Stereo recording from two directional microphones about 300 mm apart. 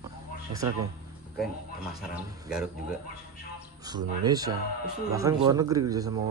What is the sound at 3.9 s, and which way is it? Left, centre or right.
Speech, centre.